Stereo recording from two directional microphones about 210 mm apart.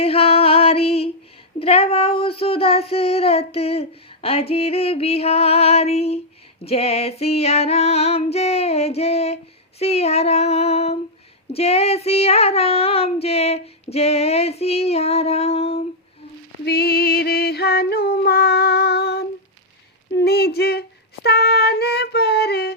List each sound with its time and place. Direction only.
0.0 s music: 25° left (ahead or behind)
1.5 s female singing: 30° left (ahead or behind)
16.6 s female singing: 50° left (ahead or behind)
20.1 s a sound: 50° left (ahead or behind)
21.2 s female singing: 50° left (ahead or behind)